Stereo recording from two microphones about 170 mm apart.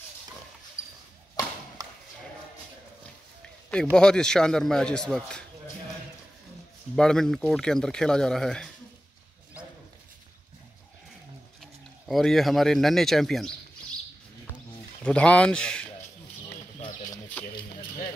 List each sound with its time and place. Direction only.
0.8 s basketball bounce: 20° left (ahead or behind)
3.9 s speech: 5° left (ahead or behind)
7.0 s speech: 5° left (ahead or behind)
11.6 s speech: centre (ahead or behind)
15.0 s speech: 5° left (ahead or behind)
16.8 s bird: 20° left (ahead or behind)
17.6 s a sound: 60° left (ahead or behind)